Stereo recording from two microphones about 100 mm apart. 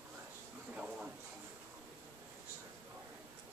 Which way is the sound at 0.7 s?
10° right (ahead or behind).